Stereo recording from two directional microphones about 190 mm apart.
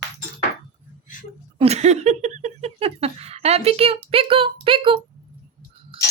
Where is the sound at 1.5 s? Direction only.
35° right (ahead or behind).